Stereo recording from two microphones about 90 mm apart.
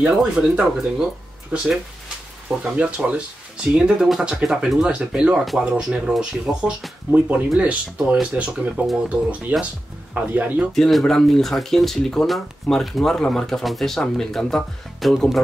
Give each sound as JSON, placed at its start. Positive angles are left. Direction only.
{"t": 0.0, "sound": "speech", "side_deg": -10}
{"t": 2.6, "sound": "speech", "side_deg": -15}
{"t": 10.7, "sound": "speech", "side_deg": 0}